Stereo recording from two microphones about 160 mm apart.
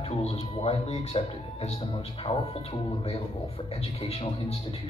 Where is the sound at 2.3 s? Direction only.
20° left (ahead or behind).